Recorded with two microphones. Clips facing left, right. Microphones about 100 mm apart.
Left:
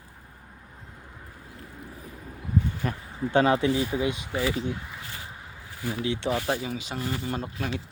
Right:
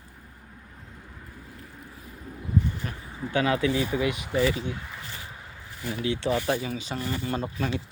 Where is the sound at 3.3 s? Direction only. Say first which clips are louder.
Left 2 dB; 30° left (ahead or behind).